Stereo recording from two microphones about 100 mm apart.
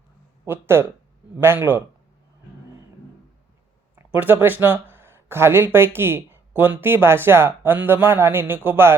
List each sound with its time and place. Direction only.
0.4 s speech: 25° right (ahead or behind)
3.9 s speech: 20° right (ahead or behind)